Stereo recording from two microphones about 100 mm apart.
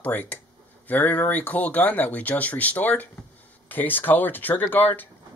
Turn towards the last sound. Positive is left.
turn(degrees=20)  # may be behind; listen again after turning